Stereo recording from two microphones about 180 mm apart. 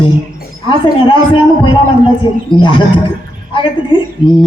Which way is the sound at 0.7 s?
25° left (ahead or behind).